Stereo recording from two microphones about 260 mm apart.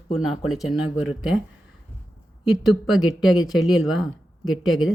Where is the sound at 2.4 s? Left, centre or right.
Centre.